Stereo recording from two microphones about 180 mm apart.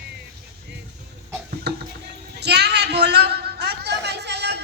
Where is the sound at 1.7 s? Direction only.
65° right (ahead or behind).